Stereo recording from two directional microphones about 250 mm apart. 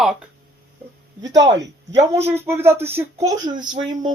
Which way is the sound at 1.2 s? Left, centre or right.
Centre.